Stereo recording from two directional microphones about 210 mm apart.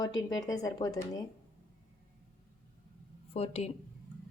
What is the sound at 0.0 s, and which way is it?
Speech, 20° left (ahead or behind).